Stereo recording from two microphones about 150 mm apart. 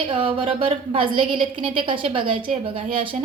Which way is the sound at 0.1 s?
40° right (ahead or behind).